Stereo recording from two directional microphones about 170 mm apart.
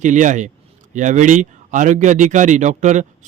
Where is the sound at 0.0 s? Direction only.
45° right (ahead or behind).